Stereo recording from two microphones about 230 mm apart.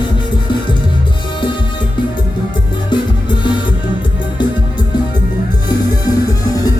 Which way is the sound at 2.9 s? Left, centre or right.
Centre.